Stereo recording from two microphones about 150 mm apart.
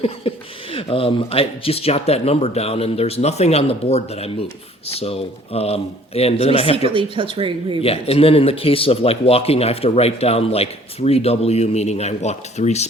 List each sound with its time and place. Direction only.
0.0 s speech: 40° left (ahead or behind)
6.9 s speech: 35° right (ahead or behind)
7.8 s speech: 40° left (ahead or behind)